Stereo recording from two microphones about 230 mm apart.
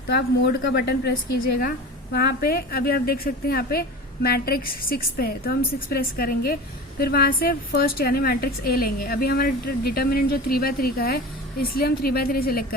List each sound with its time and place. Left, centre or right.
0.6 s a woman's voice: left